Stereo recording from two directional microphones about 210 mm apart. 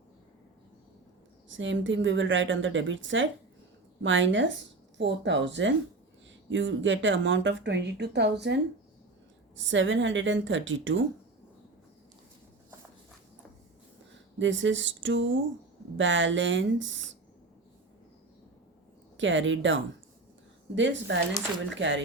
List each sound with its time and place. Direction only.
1.5 s speech: 65° right (ahead or behind)
14.3 s speech: 65° right (ahead or behind)
19.1 s speech: 65° right (ahead or behind)